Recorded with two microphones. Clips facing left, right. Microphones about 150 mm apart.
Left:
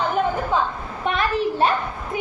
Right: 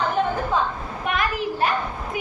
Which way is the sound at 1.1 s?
30° left (ahead or behind).